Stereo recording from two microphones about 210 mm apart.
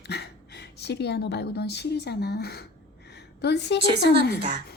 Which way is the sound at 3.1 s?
55° left (ahead or behind).